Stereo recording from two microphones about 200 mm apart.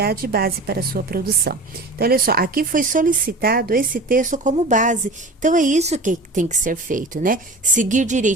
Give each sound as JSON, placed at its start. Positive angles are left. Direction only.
{"t": 0.0, "sound": "a woman's voice", "side_deg": -50}